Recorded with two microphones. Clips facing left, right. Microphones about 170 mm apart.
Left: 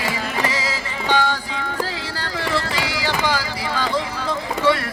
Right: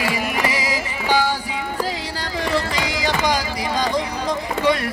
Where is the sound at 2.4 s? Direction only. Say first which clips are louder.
Right 2 dB; 15° right (ahead or behind).